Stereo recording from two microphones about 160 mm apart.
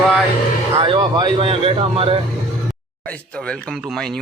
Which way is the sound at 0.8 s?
30° right (ahead or behind).